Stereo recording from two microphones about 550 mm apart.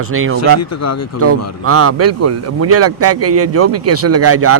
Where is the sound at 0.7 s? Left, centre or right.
Left.